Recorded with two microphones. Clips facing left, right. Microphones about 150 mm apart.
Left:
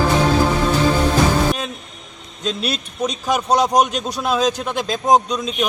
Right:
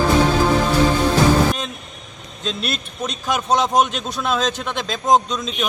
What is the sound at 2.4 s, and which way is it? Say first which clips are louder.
A man's voice: left 2 dB; 5° left (ahead or behind).